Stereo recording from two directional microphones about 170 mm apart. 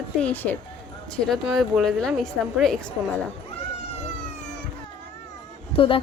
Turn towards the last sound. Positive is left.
turn(degrees=30)  # may be behind; listen again after turning